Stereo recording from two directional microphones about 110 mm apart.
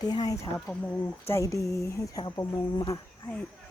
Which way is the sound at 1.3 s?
25° left (ahead or behind).